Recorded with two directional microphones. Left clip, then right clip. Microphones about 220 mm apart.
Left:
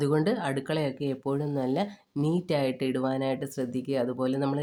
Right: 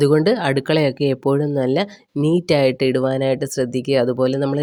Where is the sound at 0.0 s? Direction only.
30° right (ahead or behind).